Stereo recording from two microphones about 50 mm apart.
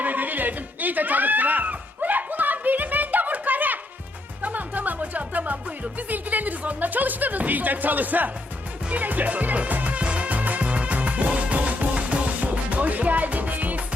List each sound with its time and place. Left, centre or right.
0.0 s music: right